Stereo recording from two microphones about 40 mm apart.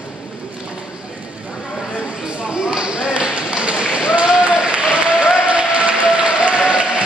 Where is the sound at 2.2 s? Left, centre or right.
Right.